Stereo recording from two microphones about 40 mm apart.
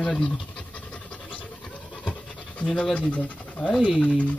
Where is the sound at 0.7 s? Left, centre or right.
Left.